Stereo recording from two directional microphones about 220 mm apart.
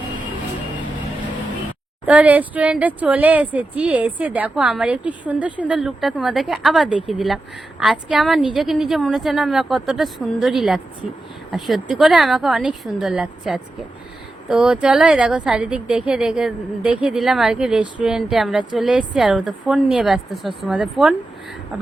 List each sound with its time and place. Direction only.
2.0 s a woman's voice: 5° right (ahead or behind)